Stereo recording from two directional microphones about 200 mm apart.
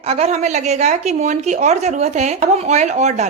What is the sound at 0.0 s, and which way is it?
Speech, 30° right (ahead or behind).